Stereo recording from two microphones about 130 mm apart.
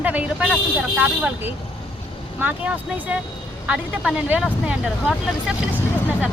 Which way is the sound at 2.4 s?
10° right (ahead or behind).